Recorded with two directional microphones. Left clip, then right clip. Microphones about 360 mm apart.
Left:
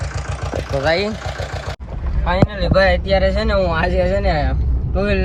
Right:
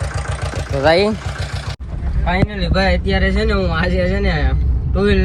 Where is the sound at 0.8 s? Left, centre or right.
Centre.